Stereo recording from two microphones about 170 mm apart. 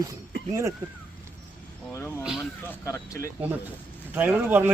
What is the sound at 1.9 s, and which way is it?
Speech, 15° left (ahead or behind).